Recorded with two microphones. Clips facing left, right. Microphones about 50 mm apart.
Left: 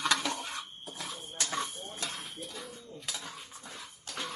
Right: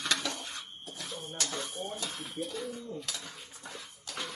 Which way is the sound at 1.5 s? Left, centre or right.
Left.